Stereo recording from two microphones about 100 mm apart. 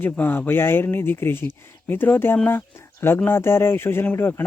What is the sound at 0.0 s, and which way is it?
Speech, 20° left (ahead or behind).